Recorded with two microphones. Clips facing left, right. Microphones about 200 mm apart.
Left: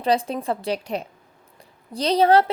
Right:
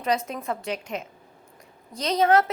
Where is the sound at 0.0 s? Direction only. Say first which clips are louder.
Left 4 dB; 30° left (ahead or behind).